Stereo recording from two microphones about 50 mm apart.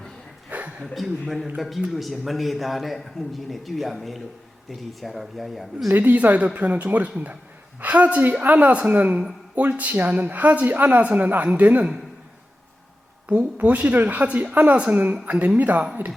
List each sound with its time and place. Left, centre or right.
0.5 s a sound: right
1.5 s a man's voice: centre
5.9 s a man's voice: right
13.2 s a woman's voice: right